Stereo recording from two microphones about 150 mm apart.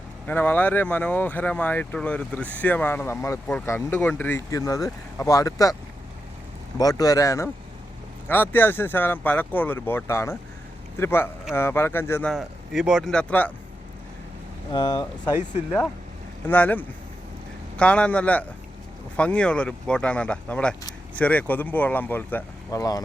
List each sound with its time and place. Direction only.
0.3 s speech: 10° left (ahead or behind)
6.7 s speech: 25° left (ahead or behind)
12.3 s speech: 5° right (ahead or behind)
14.7 s speech: 30° left (ahead or behind)
16.5 s speech: 10° left (ahead or behind)
22.8 s speech: 25° left (ahead or behind)